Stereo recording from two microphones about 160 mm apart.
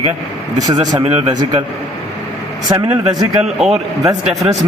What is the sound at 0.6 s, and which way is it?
Speech, 25° right (ahead or behind).